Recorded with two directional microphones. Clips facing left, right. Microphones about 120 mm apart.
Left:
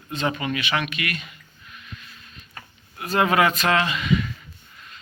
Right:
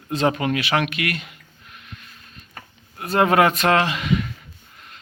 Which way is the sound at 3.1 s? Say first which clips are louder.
Right 3 dB; 50° right (ahead or behind).